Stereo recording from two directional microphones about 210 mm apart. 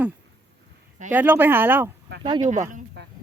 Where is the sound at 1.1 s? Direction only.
10° right (ahead or behind).